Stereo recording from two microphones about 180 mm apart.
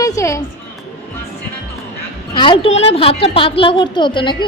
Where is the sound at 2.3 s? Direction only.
25° left (ahead or behind).